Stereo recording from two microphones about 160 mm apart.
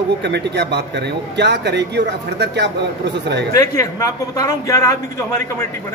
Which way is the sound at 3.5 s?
20° left (ahead or behind).